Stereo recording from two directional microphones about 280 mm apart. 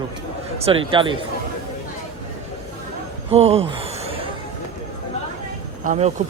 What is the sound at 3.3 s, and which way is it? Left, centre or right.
Gasp, right.